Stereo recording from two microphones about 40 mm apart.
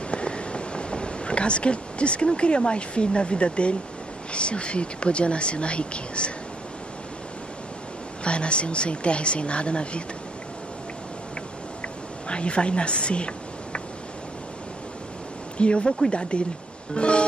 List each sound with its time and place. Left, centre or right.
0.1 s a sound: left
4.3 s speech: left
8.2 s speech: left
12.3 s speech: left
15.5 s speech: left